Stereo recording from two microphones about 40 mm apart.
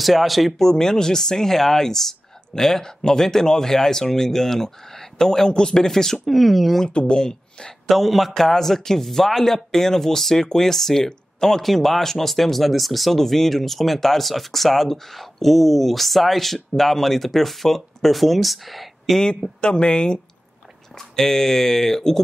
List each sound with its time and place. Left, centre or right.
0.0 s a man's voice: centre
0.6 s speech: centre
6.2 s a man's voice: centre
6.9 s speech: left
7.8 s a man's voice: centre
19.1 s speech: centre
19.6 s speech: left
21.2 s speech: centre